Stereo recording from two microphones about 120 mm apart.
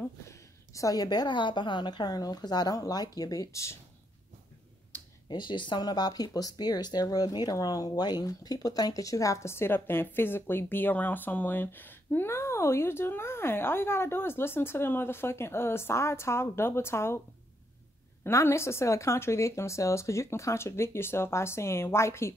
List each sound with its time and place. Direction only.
0.3 s a woman's voice: 25° left (ahead or behind)
5.3 s speech: 40° left (ahead or behind); by 17.2 s 20° left (ahead or behind)
18.2 s speech: 20° left (ahead or behind)